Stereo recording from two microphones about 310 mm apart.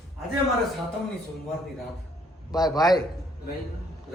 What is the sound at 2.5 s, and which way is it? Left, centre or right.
Speech, centre.